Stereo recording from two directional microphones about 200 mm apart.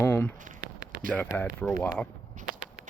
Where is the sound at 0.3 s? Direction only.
40° right (ahead or behind).